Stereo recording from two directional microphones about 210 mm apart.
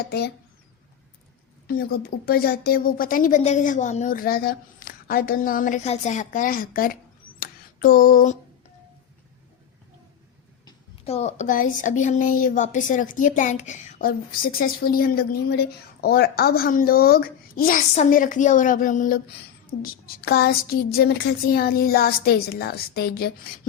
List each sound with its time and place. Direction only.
0.0 s a woman's voice: 50° left (ahead or behind)
1.6 s a woman's voice: 45° left (ahead or behind)
7.3 s a sound: 45° left (ahead or behind)
10.7 s a woman's voice: 30° left (ahead or behind); by 23.5 s 45° left (ahead or behind)